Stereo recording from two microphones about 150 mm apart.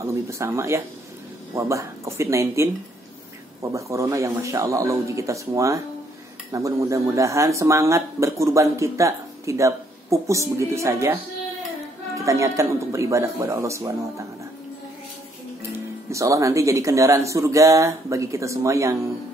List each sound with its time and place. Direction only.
0.0 s speech: 20° right (ahead or behind)
12.2 s speech: 20° right (ahead or behind)
16.1 s speech: 20° right (ahead or behind)